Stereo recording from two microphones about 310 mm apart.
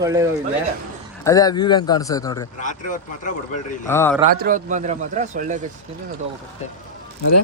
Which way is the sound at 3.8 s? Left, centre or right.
Centre.